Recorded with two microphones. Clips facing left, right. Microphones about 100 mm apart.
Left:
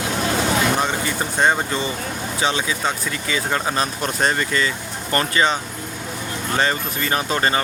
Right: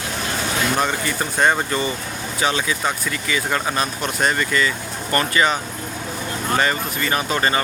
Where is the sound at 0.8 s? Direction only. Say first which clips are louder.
Even; 20° left (ahead or behind).